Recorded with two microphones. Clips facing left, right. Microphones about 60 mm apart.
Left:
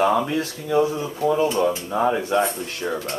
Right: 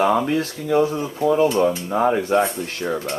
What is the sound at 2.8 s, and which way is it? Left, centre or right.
Speech, centre.